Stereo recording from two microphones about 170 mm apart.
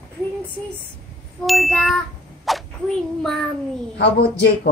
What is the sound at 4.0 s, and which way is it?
Speech, 75° left (ahead or behind).